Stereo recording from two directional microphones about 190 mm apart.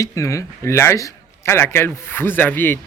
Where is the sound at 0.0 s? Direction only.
15° left (ahead or behind).